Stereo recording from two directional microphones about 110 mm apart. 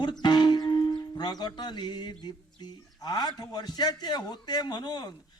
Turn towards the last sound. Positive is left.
turn(degrees=40)  # may be behind; listen again after turning